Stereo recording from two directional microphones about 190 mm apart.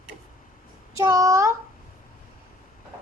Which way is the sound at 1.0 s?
15° right (ahead or behind).